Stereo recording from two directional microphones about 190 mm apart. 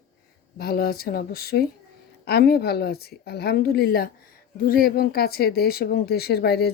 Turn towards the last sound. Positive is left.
turn(degrees=55)  # may be behind; listen again after turning